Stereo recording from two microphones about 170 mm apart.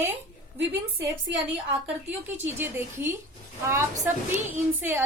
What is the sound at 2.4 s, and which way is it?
A woman's voice, 15° right (ahead or behind).